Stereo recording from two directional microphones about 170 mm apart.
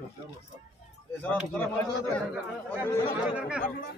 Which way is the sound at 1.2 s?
10° left (ahead or behind).